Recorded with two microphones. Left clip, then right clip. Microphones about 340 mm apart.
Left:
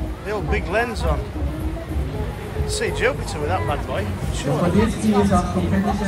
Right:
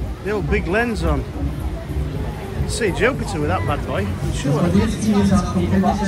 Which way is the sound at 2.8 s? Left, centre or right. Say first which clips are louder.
Right 3 dB; centre.